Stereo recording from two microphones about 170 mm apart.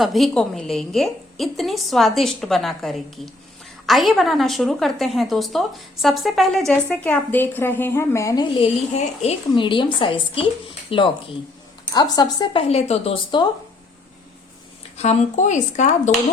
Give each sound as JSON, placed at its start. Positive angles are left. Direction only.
{"t": 0.0, "sound": "a woman's voice", "side_deg": 0}
{"t": 8.5, "sound": "speech", "side_deg": 35}
{"t": 12.6, "sound": "speech", "side_deg": 40}
{"t": 14.9, "sound": "speech", "side_deg": 40}